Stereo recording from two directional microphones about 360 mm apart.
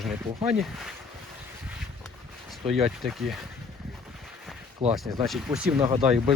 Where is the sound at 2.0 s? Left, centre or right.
Centre.